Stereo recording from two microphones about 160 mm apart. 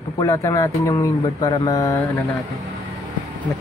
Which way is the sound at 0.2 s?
20° left (ahead or behind).